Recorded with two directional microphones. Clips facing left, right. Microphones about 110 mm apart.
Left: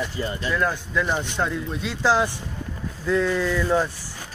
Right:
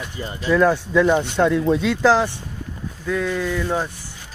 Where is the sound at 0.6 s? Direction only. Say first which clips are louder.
Right 10 dB; 70° right (ahead or behind).